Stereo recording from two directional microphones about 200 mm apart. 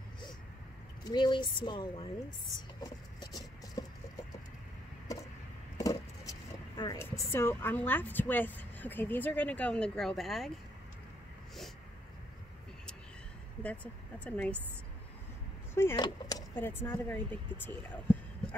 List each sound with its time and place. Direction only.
1.0 s speech: 25° left (ahead or behind)
2.8 s a sound: 20° left (ahead or behind)
5.8 s a sound: 15° left (ahead or behind)
6.8 s a woman's voice: 15° left (ahead or behind)
14.2 s a woman's voice: 5° left (ahead or behind)
15.7 s speech: 10° left (ahead or behind)